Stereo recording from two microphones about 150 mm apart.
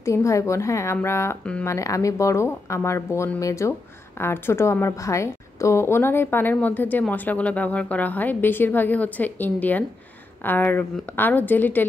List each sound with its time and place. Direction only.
0.0 s a woman's voice: 20° left (ahead or behind)
1.7 s a woman's voice: 20° left (ahead or behind)